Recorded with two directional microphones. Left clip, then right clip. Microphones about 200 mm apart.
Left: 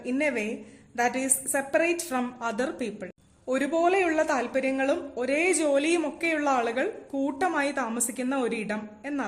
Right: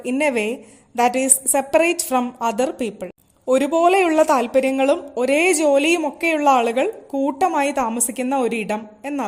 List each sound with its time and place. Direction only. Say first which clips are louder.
0.0 s a woman's voice: right 8 dB; 35° right (ahead or behind)